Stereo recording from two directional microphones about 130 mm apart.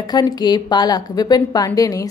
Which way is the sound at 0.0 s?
35° left (ahead or behind).